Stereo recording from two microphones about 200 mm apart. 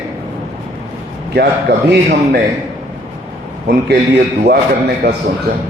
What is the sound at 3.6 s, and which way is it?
A man's voice, 55° right (ahead or behind).